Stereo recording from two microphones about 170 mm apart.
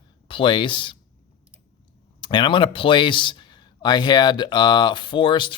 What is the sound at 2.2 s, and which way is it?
Speech, 25° left (ahead or behind).